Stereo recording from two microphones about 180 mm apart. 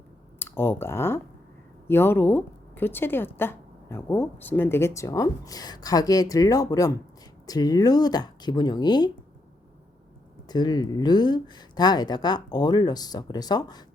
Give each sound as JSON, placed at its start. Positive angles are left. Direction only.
{"t": 0.3, "sound": "speech", "side_deg": 10}
{"t": 10.5, "sound": "speech", "side_deg": 20}